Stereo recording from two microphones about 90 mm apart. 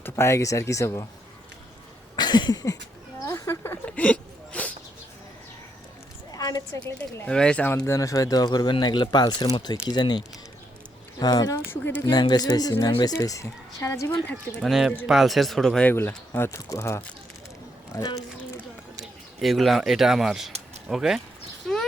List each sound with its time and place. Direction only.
0.0 s speech: 30° left (ahead or behind)
2.1 s a sound: 55° left (ahead or behind)
3.2 s a sound: 35° left (ahead or behind)
3.8 s a sound: 15° left (ahead or behind)
6.3 s a woman's voice: 45° left (ahead or behind)
7.3 s speech: 10° left (ahead or behind)
7.9 s speech: 40° left (ahead or behind)
11.7 s speech: 20° left (ahead or behind)
12.1 s speech: 50° left (ahead or behind)
13.1 s speech: 35° left (ahead or behind)
14.6 s speech: 5° right (ahead or behind)
15.8 s speech: 20° left (ahead or behind)
16.6 s speech: 40° left (ahead or behind)
19.4 s speech: centre (ahead or behind)